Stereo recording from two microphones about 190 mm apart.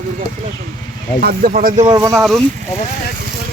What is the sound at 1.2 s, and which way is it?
Speech, 50° right (ahead or behind).